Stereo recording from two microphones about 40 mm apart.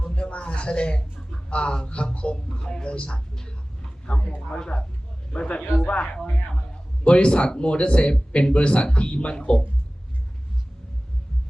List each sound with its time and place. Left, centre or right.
0.0 s speech: left
5.8 s speech: left